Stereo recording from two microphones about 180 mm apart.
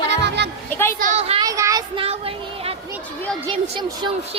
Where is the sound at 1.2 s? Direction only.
35° right (ahead or behind).